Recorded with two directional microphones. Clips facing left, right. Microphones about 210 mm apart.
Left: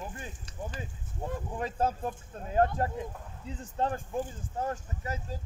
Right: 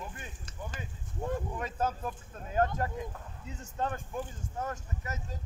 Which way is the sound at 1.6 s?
30° left (ahead or behind).